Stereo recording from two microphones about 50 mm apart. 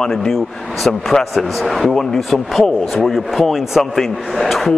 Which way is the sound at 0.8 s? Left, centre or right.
Centre.